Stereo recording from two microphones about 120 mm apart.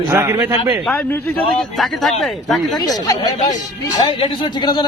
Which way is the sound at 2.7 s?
30° left (ahead or behind).